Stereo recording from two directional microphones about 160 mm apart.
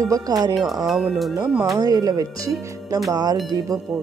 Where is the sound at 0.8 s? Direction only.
Centre (ahead or behind).